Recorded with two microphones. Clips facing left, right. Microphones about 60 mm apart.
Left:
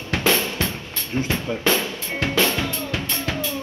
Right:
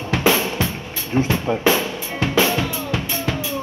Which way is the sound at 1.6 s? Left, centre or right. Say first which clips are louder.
Right 3 dB; centre.